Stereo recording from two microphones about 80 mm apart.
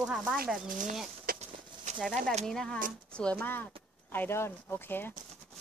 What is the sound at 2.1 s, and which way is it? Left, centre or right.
Speech, centre.